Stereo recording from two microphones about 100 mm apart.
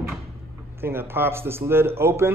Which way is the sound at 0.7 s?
25° right (ahead or behind).